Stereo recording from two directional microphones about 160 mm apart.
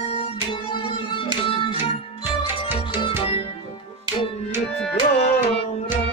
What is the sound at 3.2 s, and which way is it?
Music, 35° left (ahead or behind).